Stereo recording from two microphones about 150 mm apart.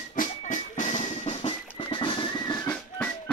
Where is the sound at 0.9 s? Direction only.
35° left (ahead or behind).